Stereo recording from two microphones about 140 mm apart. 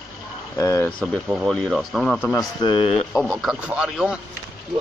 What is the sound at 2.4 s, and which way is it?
Speech, 30° left (ahead or behind).